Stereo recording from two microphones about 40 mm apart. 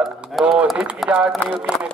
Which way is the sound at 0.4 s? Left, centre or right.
Centre.